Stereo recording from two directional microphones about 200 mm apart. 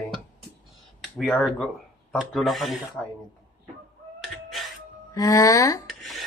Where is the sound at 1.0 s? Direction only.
Centre (ahead or behind).